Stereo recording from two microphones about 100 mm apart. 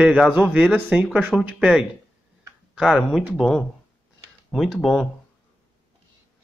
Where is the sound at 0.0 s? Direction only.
5° right (ahead or behind).